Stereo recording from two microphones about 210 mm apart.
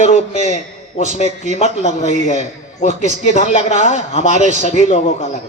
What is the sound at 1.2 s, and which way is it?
Speech, 35° right (ahead or behind).